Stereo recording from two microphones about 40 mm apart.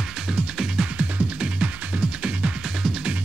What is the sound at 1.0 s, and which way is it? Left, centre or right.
Music, right.